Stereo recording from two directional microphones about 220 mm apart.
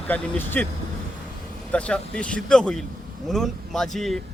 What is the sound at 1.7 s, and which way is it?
Speech, 5° left (ahead or behind).